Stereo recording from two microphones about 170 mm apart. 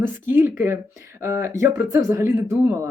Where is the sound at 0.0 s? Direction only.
15° right (ahead or behind).